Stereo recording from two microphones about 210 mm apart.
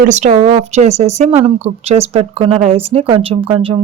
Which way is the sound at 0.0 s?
35° right (ahead or behind).